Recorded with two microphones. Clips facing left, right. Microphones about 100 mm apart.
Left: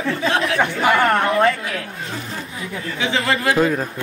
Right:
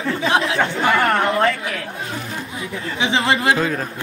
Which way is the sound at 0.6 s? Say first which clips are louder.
Left 1 dB; 10° left (ahead or behind).